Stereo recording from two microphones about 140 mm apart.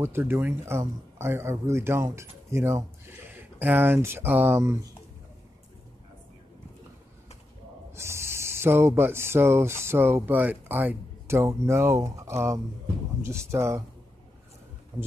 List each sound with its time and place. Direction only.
0.0 s speech: 15° right (ahead or behind)
7.9 s speech: 20° right (ahead or behind)